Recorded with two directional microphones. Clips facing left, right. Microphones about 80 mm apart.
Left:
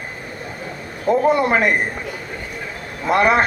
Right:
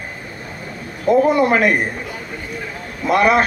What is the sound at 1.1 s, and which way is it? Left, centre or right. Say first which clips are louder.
Speech: right 2 dB; left.